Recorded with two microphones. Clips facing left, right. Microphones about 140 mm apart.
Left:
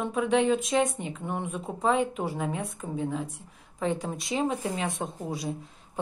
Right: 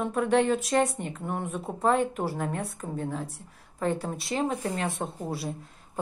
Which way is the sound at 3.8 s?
5° left (ahead or behind).